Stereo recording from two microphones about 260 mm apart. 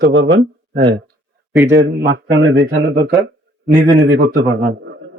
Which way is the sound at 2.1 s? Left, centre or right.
Right.